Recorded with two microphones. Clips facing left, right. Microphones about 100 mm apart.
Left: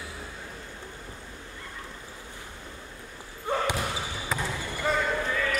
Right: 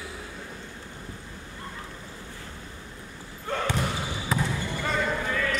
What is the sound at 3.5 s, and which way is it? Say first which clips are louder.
Basketball bounce: left 2 dB; 15° left (ahead or behind).